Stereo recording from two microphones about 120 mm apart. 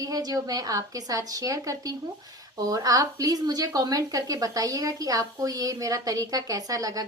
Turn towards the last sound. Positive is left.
turn(degrees=-30)  # may be behind; listen again after turning